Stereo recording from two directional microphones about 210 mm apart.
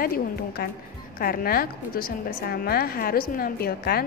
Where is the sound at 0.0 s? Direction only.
45° left (ahead or behind).